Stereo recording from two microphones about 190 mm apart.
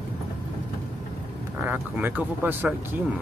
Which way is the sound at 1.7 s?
10° right (ahead or behind).